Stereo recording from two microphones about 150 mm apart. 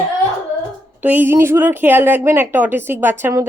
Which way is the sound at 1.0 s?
15° right (ahead or behind).